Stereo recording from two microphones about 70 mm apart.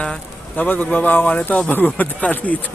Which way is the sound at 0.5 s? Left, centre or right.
Left.